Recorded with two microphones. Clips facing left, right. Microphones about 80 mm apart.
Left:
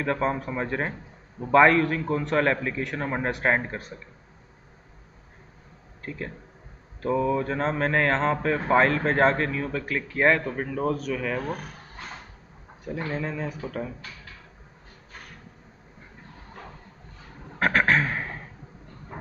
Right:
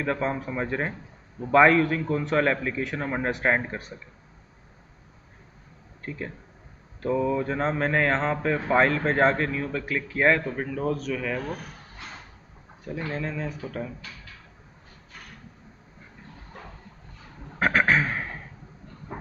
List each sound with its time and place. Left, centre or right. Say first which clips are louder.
0.0 s speech: left 1 dB; centre
6.0 s speech: even; centre
13.1 s speech: even; centre
17.6 s a sound: even; centre